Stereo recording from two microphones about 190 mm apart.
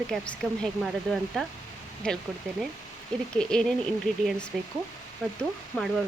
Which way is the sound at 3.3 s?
5° left (ahead or behind).